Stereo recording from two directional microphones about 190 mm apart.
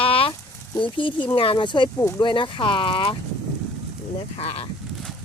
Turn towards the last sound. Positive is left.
turn(degrees=30)  # may be behind; listen again after turning